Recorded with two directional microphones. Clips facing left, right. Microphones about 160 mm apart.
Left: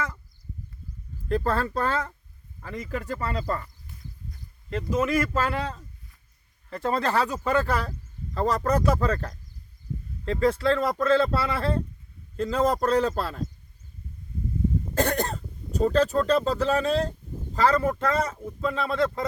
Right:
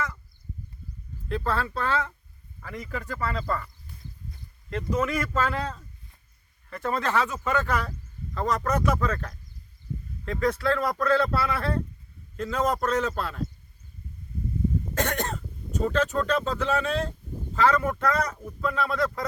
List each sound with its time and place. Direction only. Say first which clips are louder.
1.3 s speech: left 3 dB; 40° left (ahead or behind)
2.6 s a man's voice: left 3 dB; 15° left (ahead or behind)
4.3 s speech: left 2 dB; 5° left (ahead or behind)
6.7 s a man's voice: left 2 dB; 30° left (ahead or behind)
14.9 s a man's voice: left 3 dB; 35° left (ahead or behind)